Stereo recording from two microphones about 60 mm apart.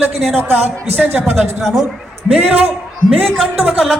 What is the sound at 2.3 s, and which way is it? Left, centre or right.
Speech, right.